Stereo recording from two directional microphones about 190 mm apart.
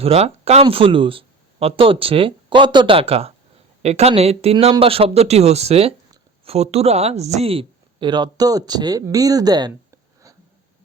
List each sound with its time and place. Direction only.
0.0 s a woman's voice: 30° right (ahead or behind)